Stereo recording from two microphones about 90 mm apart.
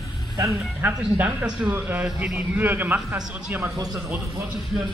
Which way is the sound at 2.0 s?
5° right (ahead or behind).